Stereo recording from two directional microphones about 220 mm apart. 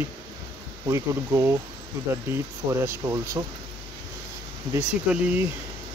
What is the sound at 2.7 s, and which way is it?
Speech, 15° right (ahead or behind).